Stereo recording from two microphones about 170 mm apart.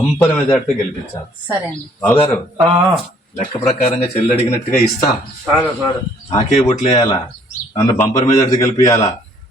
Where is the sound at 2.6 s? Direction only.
25° right (ahead or behind).